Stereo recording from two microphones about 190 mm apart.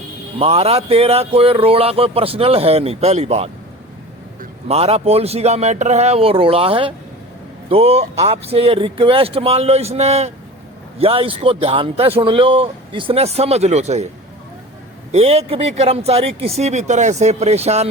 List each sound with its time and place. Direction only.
0.3 s speech: 30° right (ahead or behind)
4.7 s speech: 35° right (ahead or behind)
15.1 s speech: 30° right (ahead or behind)